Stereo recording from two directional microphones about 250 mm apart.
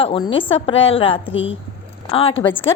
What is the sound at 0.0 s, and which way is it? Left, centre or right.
A woman's voice, left.